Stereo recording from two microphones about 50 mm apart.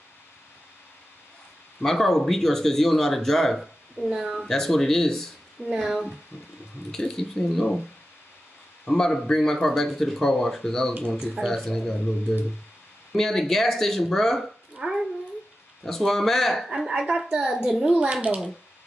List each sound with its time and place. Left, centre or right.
1.8 s speech: centre
4.1 s a woman's voice: centre
4.5 s speech: centre
6.9 s speech: centre
8.8 s speech: centre
11.1 s a woman's voice: centre
11.4 s speech: centre
14.8 s cat: centre
15.8 s speech: centre
17.4 s a woman's voice: centre
18.1 s speech: right